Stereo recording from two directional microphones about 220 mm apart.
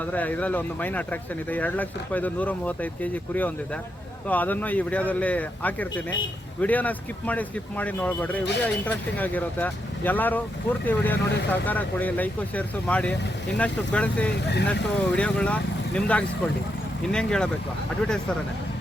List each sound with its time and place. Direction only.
0.0 s speech: 5° left (ahead or behind)
14.4 s speech: 50° left (ahead or behind)
14.7 s speech: 5° left (ahead or behind)